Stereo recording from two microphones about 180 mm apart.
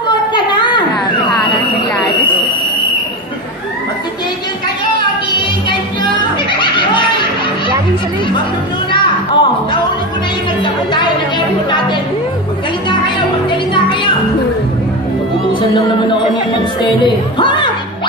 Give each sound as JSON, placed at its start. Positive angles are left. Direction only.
{"t": 8.9, "sound": "music", "side_deg": 25}
{"t": 17.0, "sound": "music", "side_deg": 25}